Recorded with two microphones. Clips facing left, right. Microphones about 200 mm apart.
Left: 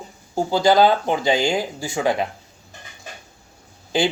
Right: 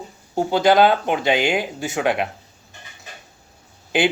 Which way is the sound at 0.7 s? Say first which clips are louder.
Even; 20° right (ahead or behind).